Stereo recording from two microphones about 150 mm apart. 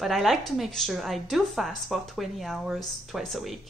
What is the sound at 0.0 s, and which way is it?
A woman's voice, centre (ahead or behind).